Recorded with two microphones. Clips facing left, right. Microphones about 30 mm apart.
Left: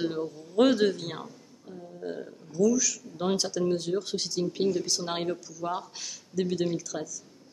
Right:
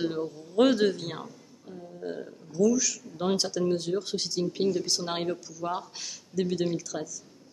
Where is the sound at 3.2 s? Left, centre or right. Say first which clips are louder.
Even; centre.